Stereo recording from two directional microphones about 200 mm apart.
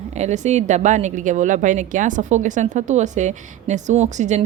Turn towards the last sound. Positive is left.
turn(degrees=-35)  # may be behind; listen again after turning